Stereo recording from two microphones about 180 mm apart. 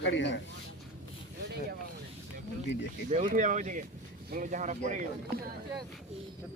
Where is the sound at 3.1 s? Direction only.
45° right (ahead or behind).